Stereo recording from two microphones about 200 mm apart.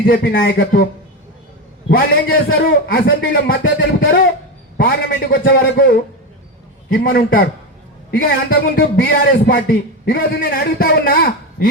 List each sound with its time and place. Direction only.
0.0 s a man's voice: 45° left (ahead or behind)
1.9 s a man's voice: 45° left (ahead or behind)
6.9 s a man's voice: 45° left (ahead or behind)